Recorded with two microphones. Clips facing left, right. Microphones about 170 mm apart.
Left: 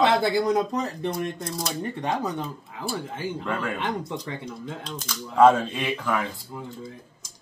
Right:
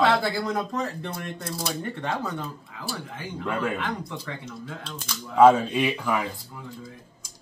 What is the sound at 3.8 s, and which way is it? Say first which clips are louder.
Speech: left 3 dB; 20° left (ahead or behind).